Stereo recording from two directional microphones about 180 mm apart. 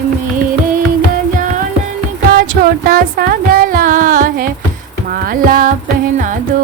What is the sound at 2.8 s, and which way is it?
Music, 55° right (ahead or behind).